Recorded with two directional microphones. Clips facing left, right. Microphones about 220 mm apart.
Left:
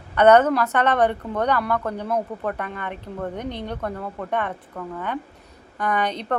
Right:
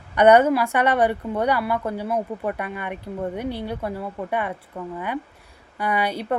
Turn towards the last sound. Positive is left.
turn(degrees=-10)  # may be behind; listen again after turning